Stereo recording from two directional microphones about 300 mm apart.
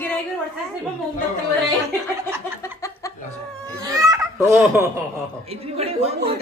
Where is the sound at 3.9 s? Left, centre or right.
Centre.